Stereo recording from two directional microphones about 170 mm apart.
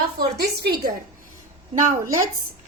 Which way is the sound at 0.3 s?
70° right (ahead or behind).